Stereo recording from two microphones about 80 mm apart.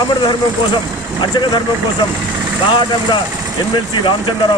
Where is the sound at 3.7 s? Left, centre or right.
Left.